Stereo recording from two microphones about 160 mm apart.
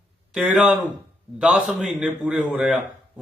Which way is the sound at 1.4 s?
5° right (ahead or behind).